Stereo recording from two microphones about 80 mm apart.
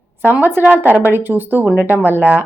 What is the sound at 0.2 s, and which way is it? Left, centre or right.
Speech, right.